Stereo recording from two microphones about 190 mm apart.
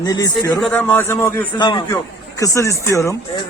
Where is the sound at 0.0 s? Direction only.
20° left (ahead or behind).